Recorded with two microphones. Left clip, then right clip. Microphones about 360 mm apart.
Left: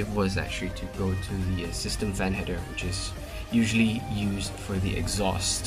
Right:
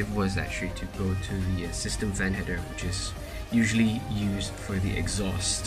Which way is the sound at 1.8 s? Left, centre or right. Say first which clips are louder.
Even; centre.